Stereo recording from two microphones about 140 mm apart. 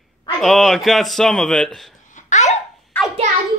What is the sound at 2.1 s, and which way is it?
Baby laughter, 60° left (ahead or behind).